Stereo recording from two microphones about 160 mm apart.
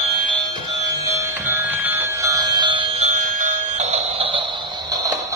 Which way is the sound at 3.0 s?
50° right (ahead or behind).